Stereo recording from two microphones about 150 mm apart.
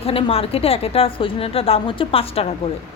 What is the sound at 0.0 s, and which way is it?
Speech, 40° left (ahead or behind).